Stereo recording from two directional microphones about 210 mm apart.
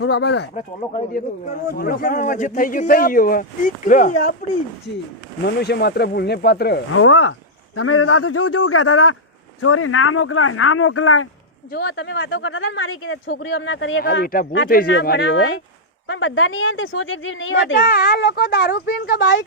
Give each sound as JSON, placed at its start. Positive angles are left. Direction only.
{"t": 0.0, "sound": "speech", "side_deg": 55}
{"t": 0.5, "sound": "speech", "side_deg": 35}
{"t": 1.7, "sound": "speech", "side_deg": 45}
{"t": 5.5, "sound": "speech", "side_deg": 50}
{"t": 6.9, "sound": "a man's voice", "side_deg": 75}
{"t": 9.6, "sound": "speech", "side_deg": 90}
{"t": 11.7, "sound": "speech", "side_deg": 55}
{"t": 13.3, "sound": "speech", "side_deg": 60}
{"t": 14.0, "sound": "speech", "side_deg": 45}
{"t": 17.7, "sound": "speech", "side_deg": 45}